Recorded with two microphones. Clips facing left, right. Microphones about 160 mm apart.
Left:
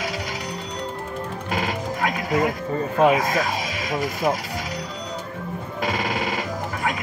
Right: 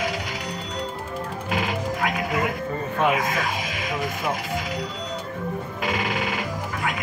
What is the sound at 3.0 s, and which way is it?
Speech, 35° left (ahead or behind).